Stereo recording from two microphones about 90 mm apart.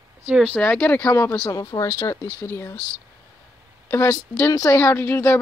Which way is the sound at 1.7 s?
60° left (ahead or behind).